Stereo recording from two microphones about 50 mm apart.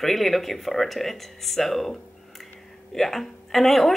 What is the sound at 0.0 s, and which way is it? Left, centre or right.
A woman's voice, centre.